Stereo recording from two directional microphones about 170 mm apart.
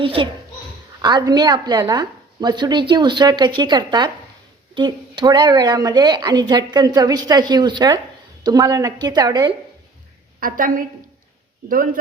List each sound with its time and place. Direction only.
0.0 s a child's voice: 30° right (ahead or behind)
10.4 s a woman's voice: 55° right (ahead or behind)